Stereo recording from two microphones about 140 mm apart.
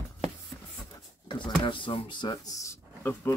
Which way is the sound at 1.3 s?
35° left (ahead or behind).